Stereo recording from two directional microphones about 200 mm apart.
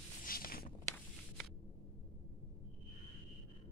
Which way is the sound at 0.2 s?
45° left (ahead or behind).